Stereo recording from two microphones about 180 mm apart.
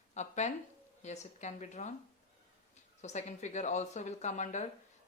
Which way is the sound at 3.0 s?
40° left (ahead or behind).